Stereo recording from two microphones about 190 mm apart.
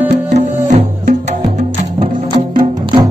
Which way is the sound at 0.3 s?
35° right (ahead or behind).